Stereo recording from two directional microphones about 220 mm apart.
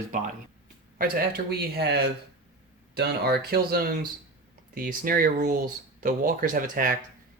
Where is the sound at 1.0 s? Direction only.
45° right (ahead or behind).